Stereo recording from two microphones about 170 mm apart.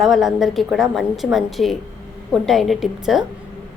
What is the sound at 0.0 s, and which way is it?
A woman's voice, centre (ahead or behind).